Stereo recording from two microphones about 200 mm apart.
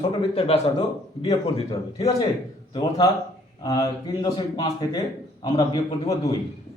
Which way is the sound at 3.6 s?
20° left (ahead or behind).